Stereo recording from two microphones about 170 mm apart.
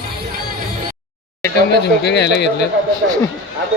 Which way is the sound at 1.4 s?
80° left.